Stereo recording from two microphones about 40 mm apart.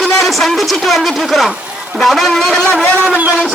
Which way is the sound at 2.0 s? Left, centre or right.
Centre.